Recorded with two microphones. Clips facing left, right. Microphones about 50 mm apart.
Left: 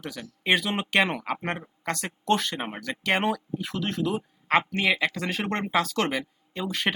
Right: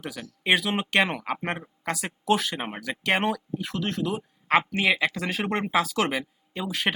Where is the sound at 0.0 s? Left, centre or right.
Centre.